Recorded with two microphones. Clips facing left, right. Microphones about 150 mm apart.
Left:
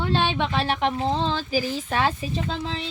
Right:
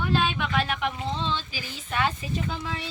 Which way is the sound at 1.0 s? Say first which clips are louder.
Left 5 dB; 45° left (ahead or behind).